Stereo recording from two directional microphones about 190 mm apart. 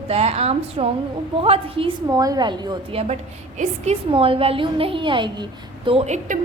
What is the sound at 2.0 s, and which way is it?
A woman's voice, 20° right (ahead or behind).